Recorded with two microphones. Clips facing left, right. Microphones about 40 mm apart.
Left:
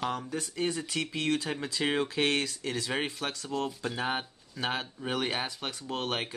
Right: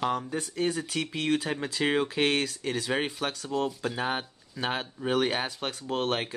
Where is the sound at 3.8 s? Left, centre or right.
Centre.